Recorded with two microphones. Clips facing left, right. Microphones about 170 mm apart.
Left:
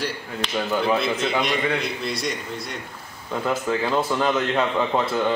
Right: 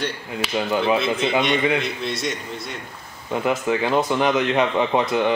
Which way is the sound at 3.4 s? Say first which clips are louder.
Right 2 dB; 10° right (ahead or behind).